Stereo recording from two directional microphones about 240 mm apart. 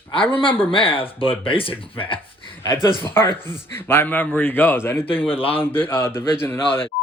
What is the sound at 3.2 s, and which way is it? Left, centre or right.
Speech, centre.